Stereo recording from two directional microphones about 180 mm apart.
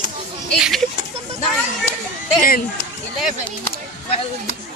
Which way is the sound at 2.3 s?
55° left (ahead or behind).